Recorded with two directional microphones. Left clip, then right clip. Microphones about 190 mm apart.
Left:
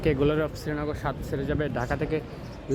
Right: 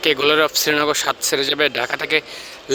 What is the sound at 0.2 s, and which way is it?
Speech, 10° right (ahead or behind).